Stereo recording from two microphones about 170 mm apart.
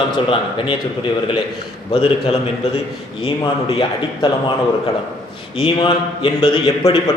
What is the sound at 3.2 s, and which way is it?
Speech, 35° left (ahead or behind).